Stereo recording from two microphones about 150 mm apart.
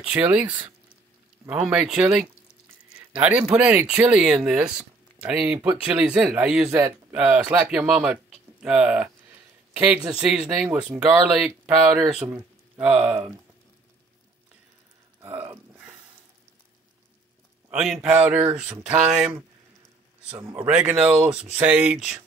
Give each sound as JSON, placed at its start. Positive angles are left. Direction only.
{"t": 0.0, "sound": "speech", "side_deg": -10}
{"t": 6.7, "sound": "speech", "side_deg": -20}
{"t": 15.4, "sound": "a sound", "side_deg": -15}
{"t": 17.6, "sound": "speech", "side_deg": -5}
{"t": 20.4, "sound": "speech", "side_deg": -10}